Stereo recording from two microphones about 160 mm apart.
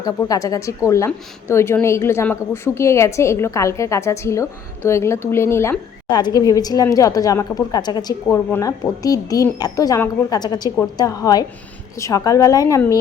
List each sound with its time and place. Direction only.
0.0 s a woman's voice: 20° left (ahead or behind)